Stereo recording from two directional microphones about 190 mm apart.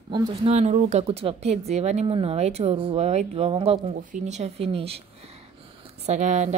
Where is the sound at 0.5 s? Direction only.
35° right (ahead or behind).